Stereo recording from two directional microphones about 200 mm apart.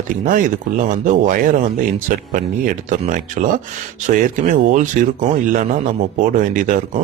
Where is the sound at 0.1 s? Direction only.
40° right (ahead or behind).